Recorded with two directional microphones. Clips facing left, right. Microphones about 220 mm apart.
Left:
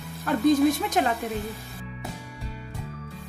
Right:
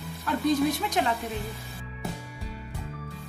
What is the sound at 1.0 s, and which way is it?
Speech, 50° left (ahead or behind).